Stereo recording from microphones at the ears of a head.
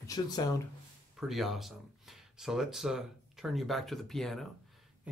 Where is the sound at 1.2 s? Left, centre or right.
Centre.